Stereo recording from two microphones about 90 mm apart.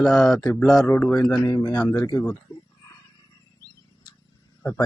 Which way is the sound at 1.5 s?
55° left (ahead or behind).